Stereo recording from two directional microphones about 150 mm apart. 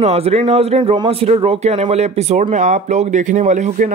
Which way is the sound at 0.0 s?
45° right (ahead or behind).